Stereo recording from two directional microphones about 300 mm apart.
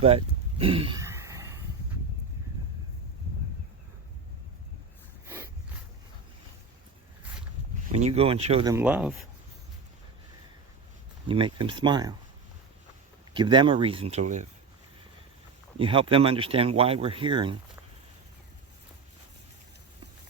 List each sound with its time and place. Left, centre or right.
0.6 s a sound: centre
7.9 s speech: right
8.7 s speech: centre
11.3 s speech: centre
13.3 s speech: centre
15.8 s speech: centre